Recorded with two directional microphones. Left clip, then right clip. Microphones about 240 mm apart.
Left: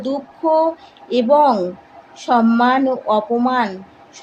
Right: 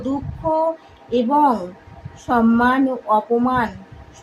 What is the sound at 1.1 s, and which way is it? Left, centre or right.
A woman's voice, centre.